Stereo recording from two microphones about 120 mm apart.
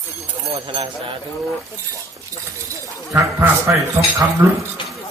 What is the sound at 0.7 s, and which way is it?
Speech, 45° right (ahead or behind).